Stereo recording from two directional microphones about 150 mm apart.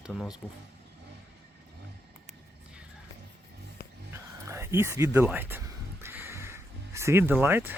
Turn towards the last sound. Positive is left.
turn(degrees=-15)  # may be behind; listen again after turning